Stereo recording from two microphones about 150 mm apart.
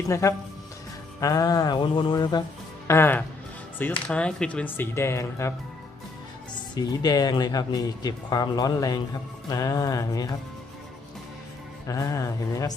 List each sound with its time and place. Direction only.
0.0 s speech: 20° left (ahead or behind)
2.8 s speech: 15° left (ahead or behind)
6.7 s speech: 25° left (ahead or behind)
11.9 s speech: 20° left (ahead or behind)